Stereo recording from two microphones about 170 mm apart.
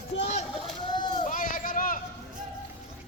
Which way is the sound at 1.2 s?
50° left (ahead or behind).